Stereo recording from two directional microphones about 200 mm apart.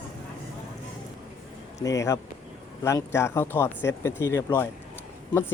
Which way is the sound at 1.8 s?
15° left (ahead or behind).